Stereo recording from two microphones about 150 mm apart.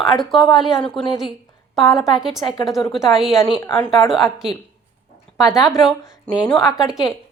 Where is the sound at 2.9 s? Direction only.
Centre (ahead or behind).